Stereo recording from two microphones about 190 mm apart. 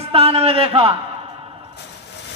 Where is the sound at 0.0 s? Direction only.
30° right (ahead or behind).